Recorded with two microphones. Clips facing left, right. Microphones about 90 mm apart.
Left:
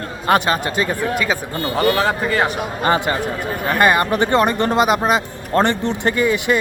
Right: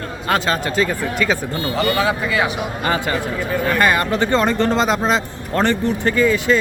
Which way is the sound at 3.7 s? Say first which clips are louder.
Left 3 dB; 20° left (ahead or behind).